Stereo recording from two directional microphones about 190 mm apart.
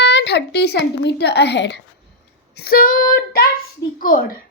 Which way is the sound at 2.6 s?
50° left (ahead or behind).